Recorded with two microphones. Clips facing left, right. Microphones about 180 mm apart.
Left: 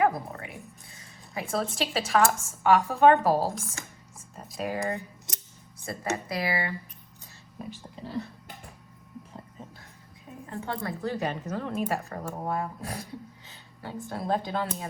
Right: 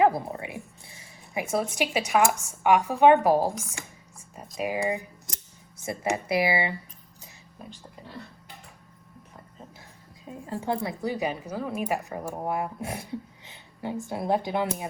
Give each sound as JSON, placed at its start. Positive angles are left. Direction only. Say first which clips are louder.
{"t": 0.0, "sound": "dog", "louder": "right 3 dB", "side_deg": -20}
{"t": 1.3, "sound": "a woman's voice", "louder": "right 3 dB", "side_deg": -15}
{"t": 7.6, "sound": "speech", "louder": "left 5 dB", "side_deg": 0}
{"t": 10.5, "sound": "a woman's voice", "louder": "right 5 dB", "side_deg": -30}
{"t": 10.8, "sound": "a woman's voice", "louder": "right 2 dB", "side_deg": -15}
{"t": 14.1, "sound": "a woman's voice", "louder": "right 2 dB", "side_deg": -15}